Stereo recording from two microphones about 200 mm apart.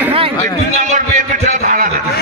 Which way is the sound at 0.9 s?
40° right (ahead or behind).